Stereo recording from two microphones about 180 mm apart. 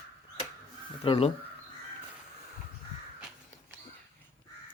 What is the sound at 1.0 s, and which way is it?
Speech, 30° left (ahead or behind).